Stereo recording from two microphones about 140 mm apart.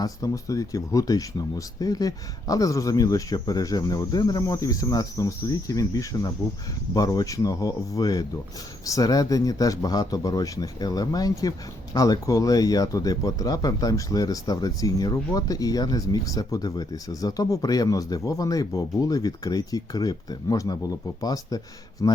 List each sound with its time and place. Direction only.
0.0 s speech: 25° left (ahead or behind)